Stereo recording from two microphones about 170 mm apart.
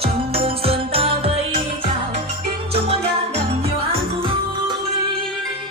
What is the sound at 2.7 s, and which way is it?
Music, 35° right (ahead or behind).